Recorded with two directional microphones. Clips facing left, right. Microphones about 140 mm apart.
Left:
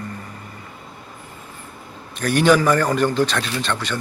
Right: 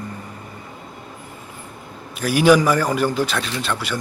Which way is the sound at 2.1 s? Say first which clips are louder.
Right 1 dB; 5° right (ahead or behind).